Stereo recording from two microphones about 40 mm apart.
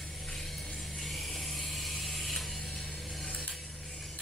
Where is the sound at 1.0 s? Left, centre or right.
Centre.